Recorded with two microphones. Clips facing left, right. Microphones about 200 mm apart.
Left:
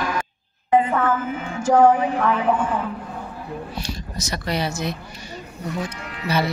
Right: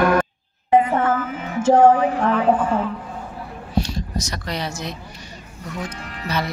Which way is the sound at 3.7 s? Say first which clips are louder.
Right 7 dB; 5° left (ahead or behind).